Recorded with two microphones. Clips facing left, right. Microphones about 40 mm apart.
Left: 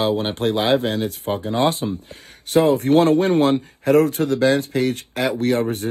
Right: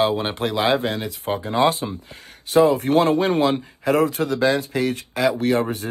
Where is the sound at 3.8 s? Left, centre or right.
Right.